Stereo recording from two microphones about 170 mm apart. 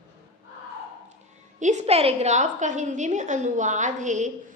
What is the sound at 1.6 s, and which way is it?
A woman's voice, 45° right (ahead or behind).